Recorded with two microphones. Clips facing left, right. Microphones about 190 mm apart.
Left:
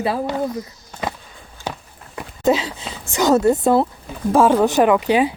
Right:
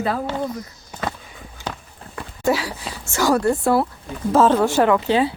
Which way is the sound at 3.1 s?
20° left (ahead or behind).